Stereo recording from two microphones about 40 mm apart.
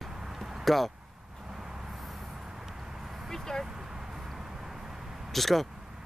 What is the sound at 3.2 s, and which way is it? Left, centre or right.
Speech, centre.